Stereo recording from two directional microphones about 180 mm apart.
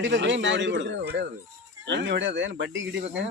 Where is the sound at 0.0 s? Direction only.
85° right.